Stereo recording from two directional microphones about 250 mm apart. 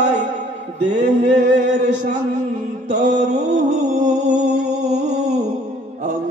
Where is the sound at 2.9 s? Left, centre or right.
Right.